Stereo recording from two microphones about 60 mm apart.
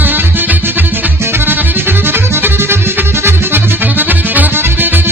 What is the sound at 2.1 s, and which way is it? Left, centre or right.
Accordion, right.